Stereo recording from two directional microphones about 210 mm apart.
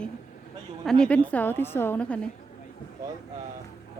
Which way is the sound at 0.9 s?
5° left (ahead or behind).